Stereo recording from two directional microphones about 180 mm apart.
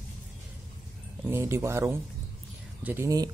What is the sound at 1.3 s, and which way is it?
Speech, 15° right (ahead or behind).